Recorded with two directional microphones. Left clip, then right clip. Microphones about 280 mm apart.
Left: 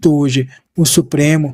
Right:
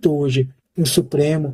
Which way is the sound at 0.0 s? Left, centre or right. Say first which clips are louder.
Left 4 dB; left.